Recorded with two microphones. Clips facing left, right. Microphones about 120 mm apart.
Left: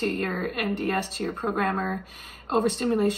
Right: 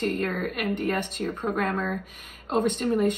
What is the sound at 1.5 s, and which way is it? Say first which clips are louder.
Speech: left 1 dB; 40° left (ahead or behind).